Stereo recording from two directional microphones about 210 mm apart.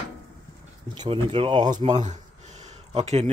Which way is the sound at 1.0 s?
25° right (ahead or behind).